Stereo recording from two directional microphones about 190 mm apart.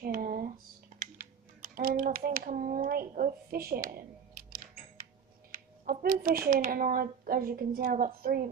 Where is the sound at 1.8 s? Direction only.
50° right (ahead or behind).